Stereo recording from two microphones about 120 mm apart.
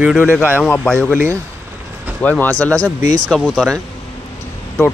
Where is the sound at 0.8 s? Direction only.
15° left (ahead or behind).